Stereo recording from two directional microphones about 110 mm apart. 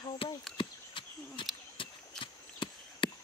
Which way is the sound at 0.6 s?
50° left (ahead or behind).